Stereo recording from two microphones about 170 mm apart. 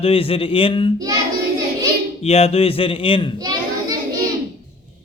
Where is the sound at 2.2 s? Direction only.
35° left (ahead or behind).